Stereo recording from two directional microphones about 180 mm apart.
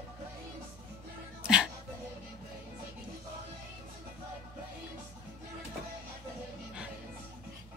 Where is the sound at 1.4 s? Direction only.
5° right (ahead or behind).